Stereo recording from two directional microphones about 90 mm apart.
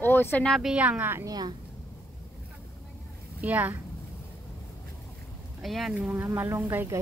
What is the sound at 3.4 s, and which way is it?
Speech, 20° right (ahead or behind).